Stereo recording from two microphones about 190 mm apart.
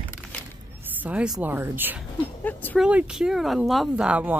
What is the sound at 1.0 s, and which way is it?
Speech, 5° right (ahead or behind).